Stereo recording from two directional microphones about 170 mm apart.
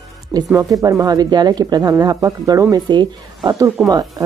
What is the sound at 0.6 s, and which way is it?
Speech, 20° right (ahead or behind).